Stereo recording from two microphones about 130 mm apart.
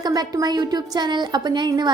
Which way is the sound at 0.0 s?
30° right (ahead or behind).